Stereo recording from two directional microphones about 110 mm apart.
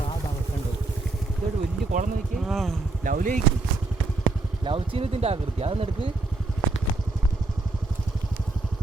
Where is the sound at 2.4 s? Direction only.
Centre (ahead or behind).